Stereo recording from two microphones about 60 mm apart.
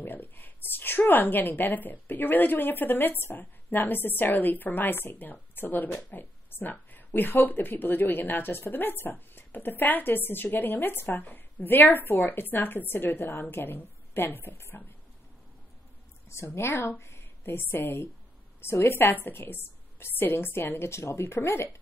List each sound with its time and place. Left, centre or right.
0.0 s a woman's voice: left
16.4 s a woman's voice: left